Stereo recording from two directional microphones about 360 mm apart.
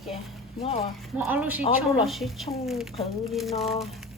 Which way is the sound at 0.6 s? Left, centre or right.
Centre.